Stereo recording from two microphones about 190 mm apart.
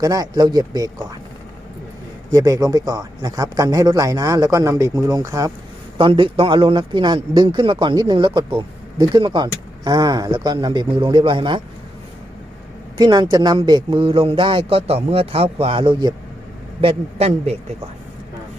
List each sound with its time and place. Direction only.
0.0 s a man's voice: 20° right (ahead or behind)
2.3 s a man's voice: 20° right (ahead or behind)
6.0 s a man's voice: 25° right (ahead or behind)
13.0 s a man's voice: 20° right (ahead or behind)